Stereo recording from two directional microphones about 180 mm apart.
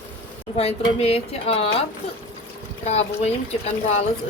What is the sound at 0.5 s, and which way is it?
Speech, 35° left (ahead or behind).